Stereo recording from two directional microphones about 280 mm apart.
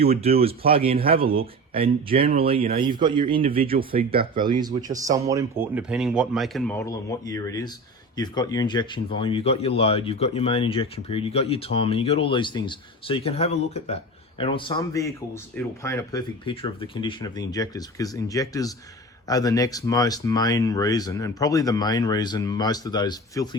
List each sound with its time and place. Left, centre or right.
0.0 s speech: right
3.6 s speech: right
4.4 s speech: centre